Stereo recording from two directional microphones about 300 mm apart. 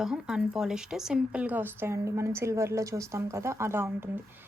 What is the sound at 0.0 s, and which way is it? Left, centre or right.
Speech, centre.